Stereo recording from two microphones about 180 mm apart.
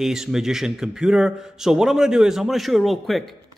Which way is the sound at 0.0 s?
5° right (ahead or behind).